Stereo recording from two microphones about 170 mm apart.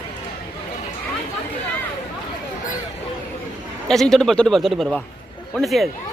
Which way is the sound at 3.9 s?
Centre (ahead or behind).